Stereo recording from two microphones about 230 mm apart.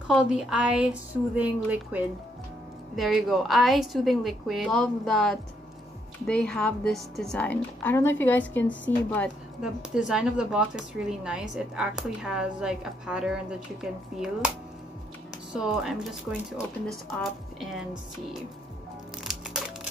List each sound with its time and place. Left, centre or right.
0.1 s a woman's voice: centre
15.5 s a woman's voice: centre
19.2 s crushing: centre